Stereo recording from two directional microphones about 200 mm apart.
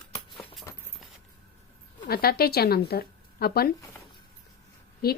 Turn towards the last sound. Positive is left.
turn(degrees=50)  # may be behind; listen again after turning